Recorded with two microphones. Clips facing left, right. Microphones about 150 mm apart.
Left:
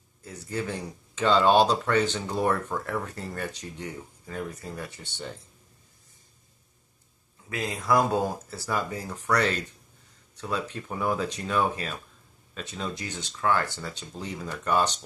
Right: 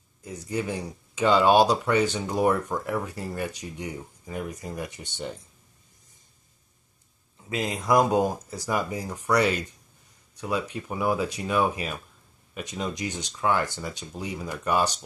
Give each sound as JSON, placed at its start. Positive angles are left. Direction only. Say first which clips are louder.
{"t": 0.2, "sound": "speech", "louder": "right 2 dB", "side_deg": -15}
{"t": 7.4, "sound": "speech", "louder": "right 2 dB", "side_deg": -20}